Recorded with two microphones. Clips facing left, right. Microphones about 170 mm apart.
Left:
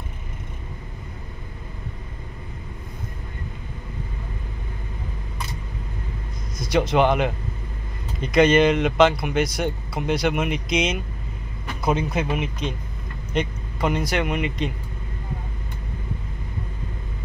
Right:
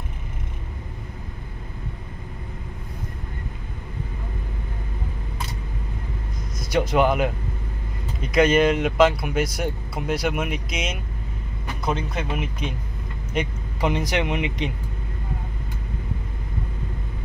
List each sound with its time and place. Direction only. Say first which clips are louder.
6.7 s speech: left 1 dB; 5° right (ahead or behind)
11.8 s speech: left 4 dB; 5° left (ahead or behind)
13.3 s a sound: left 2 dB; 10° right (ahead or behind)
13.8 s speech: even; 20° right (ahead or behind)